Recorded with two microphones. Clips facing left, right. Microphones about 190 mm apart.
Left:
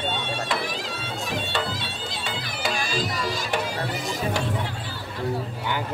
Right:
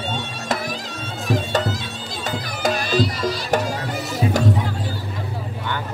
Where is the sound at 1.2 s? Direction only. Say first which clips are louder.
Right 8 dB; 45° right (ahead or behind).